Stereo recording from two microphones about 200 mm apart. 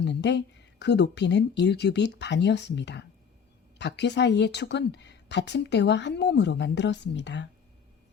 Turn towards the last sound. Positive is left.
turn(degrees=60)  # may be behind; listen again after turning